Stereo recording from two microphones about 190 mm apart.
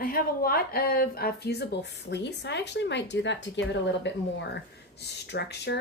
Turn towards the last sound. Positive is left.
turn(degrees=60)  # may be behind; listen again after turning